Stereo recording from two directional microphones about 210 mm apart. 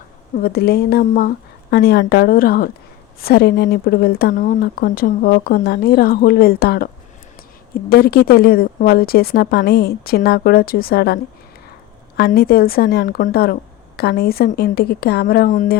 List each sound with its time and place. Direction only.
0.4 s speech: 50° left (ahead or behind)